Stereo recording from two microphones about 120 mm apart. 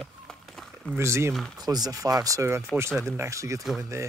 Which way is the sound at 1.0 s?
25° right (ahead or behind).